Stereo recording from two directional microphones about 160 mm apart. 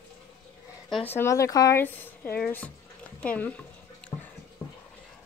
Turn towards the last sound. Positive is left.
turn(degrees=10)  # may be behind; listen again after turning